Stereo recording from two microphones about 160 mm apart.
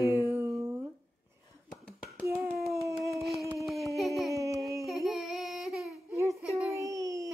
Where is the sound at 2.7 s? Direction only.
20° right (ahead or behind).